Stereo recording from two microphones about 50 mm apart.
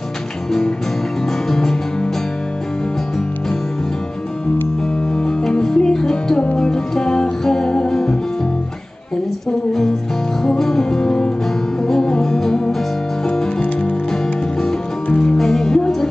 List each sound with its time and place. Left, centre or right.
0.5 s music: centre
5.1 s music: centre
10.4 s music: centre
15.1 s music: centre